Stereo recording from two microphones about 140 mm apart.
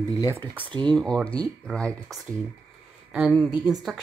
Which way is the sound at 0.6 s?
35° right (ahead or behind).